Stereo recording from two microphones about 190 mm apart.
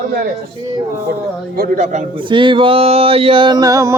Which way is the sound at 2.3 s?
25° right (ahead or behind).